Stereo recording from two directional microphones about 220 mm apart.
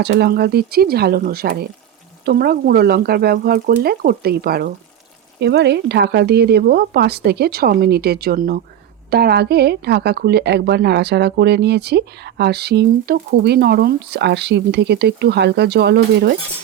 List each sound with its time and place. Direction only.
0.0 s speech: 50° right (ahead or behind)